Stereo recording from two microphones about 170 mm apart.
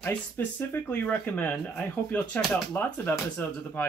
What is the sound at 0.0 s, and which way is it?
Speech, 10° left (ahead or behind).